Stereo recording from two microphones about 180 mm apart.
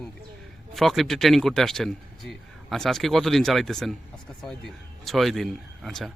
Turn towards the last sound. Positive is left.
turn(degrees=0)  # may be behind; listen again after turning